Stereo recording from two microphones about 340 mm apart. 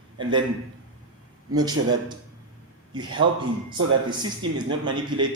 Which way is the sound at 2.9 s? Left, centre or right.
Centre.